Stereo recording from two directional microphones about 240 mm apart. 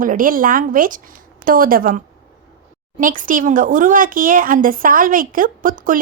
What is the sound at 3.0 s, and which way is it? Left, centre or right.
Speech, right.